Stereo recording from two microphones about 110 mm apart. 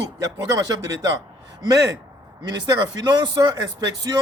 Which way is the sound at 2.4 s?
40° right (ahead or behind).